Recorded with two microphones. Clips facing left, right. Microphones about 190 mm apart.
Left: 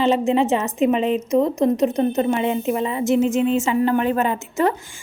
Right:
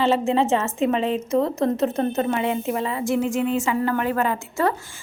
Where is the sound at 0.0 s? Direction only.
15° left (ahead or behind).